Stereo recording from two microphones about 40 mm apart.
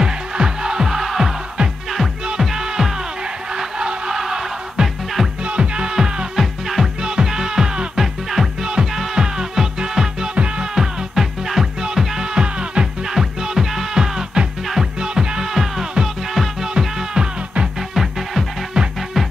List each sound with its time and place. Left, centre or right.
0.0 s music: centre
5.4 s music: right
6.3 s music: centre
7.0 s music: centre
8.0 s music: centre; by 10.7 s right
10.7 s music: centre
13.0 s music: centre
15.0 s music: right
18.8 s music: right